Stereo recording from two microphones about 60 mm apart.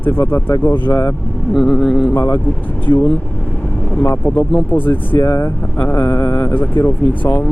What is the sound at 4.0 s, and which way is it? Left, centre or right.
Speech, left.